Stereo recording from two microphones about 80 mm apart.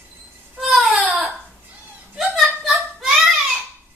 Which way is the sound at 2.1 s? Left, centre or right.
Centre.